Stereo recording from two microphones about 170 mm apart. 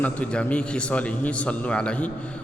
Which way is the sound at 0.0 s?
10° left (ahead or behind).